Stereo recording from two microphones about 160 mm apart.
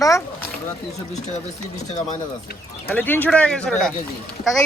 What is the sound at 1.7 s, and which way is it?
Speech, 45° left (ahead or behind).